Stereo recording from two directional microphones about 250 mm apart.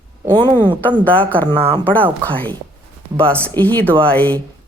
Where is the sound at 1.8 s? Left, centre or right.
Centre.